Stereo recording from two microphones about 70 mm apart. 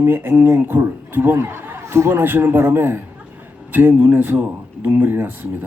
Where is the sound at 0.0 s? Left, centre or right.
Right.